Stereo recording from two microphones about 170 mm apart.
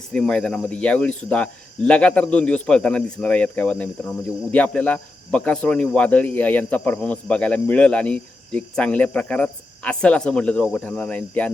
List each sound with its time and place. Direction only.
0.1 s speech: 5° left (ahead or behind)